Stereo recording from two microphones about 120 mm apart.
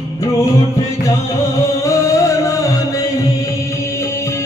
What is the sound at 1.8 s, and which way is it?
Music, 25° left (ahead or behind).